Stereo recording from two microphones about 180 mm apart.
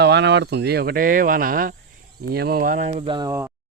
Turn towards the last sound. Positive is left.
turn(degrees=-25)  # may be behind; listen again after turning